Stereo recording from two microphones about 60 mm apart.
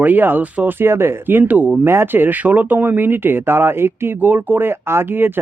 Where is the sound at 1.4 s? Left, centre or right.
Right.